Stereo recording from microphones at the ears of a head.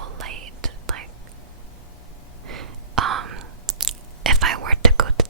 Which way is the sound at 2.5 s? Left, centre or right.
Right.